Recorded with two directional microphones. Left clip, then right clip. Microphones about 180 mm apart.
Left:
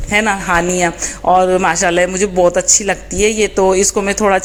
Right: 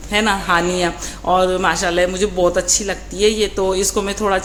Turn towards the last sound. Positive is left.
turn(degrees=30)  # may be behind; listen again after turning